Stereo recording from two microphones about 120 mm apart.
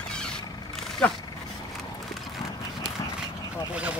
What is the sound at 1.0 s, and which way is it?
Speech, 10° left (ahead or behind).